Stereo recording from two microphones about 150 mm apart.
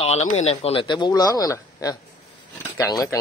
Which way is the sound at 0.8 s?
30° left (ahead or behind).